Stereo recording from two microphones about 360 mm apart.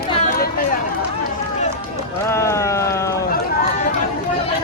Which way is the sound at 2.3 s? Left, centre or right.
Centre.